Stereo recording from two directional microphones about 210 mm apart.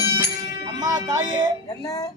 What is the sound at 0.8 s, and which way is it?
Music, 15° right (ahead or behind).